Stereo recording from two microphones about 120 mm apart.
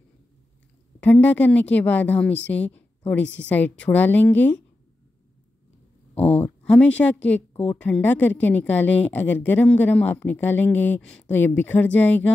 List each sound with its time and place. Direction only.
1.0 s speech: 10° left (ahead or behind)
6.1 s speech: 55° left (ahead or behind)
6.6 s speech: 10° left (ahead or behind)